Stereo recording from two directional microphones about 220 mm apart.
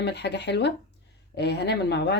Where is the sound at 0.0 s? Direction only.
50° left (ahead or behind).